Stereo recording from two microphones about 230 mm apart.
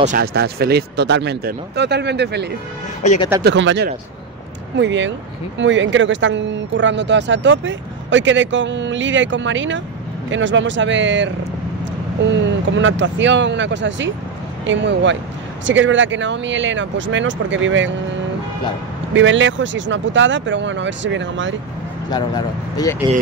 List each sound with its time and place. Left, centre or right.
0.0 s speech: right
3.0 s speech: left
3.4 s speech: right
19.1 s speech: right
22.1 s speech: centre